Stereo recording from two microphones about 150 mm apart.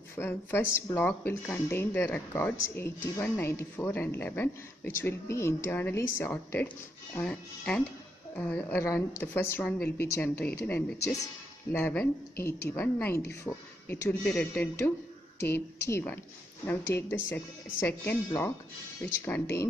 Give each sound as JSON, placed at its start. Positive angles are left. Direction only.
{"t": 0.1, "sound": "speech", "side_deg": 15}
{"t": 11.7, "sound": "speech", "side_deg": 10}
{"t": 17.7, "sound": "speech", "side_deg": 15}